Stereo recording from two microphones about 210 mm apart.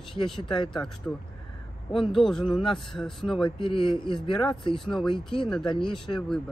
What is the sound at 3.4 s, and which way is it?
Speech, 25° left (ahead or behind).